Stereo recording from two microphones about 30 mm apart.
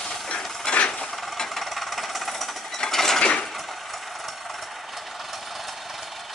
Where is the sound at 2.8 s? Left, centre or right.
Centre.